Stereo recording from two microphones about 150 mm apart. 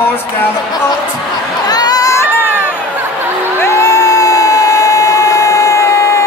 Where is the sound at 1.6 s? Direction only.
25° left (ahead or behind).